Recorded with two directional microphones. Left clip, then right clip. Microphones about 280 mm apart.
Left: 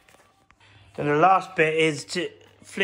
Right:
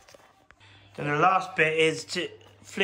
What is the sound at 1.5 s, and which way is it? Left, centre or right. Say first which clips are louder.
A man's voice: left 2 dB; centre.